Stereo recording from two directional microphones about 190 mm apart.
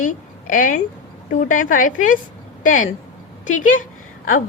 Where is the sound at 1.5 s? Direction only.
45° left (ahead or behind).